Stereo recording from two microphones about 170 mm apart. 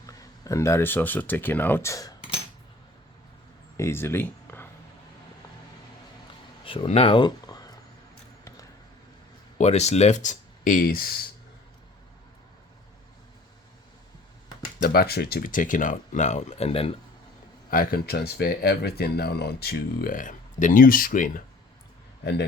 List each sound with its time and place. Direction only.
0.1 s speech: 20° left (ahead or behind)
3.8 s a sound: 15° left (ahead or behind)
6.7 s speech: 35° left (ahead or behind)
9.6 s speech: 40° left (ahead or behind); by 11.2 s 60° left (ahead or behind)
14.8 s speech: 65° left (ahead or behind); by 16.9 s 35° left (ahead or behind)
17.7 s speech: 60° left (ahead or behind)
22.2 s a man's voice: 75° left (ahead or behind)